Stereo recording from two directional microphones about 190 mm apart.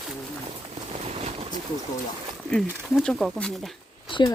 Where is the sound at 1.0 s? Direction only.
35° right (ahead or behind).